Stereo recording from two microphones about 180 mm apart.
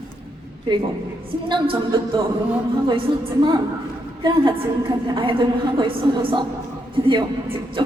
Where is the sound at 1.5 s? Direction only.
25° right (ahead or behind).